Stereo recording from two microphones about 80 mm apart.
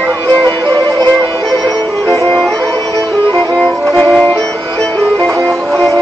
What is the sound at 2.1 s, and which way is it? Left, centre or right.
Music, centre.